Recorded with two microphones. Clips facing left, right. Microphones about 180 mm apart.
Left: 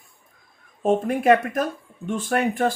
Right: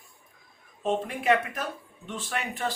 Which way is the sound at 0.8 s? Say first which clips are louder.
Left 7 dB; 45° left (ahead or behind).